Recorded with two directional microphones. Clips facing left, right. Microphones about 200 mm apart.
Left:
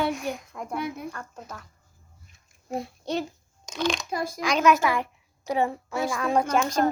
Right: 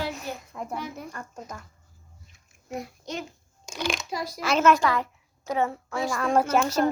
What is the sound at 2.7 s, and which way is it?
Speech, 30° left (ahead or behind).